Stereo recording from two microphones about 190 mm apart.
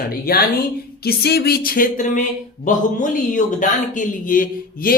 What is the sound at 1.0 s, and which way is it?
Speech, 55° left (ahead or behind).